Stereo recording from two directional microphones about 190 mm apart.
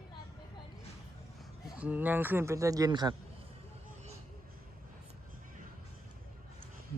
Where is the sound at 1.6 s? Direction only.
5° right (ahead or behind).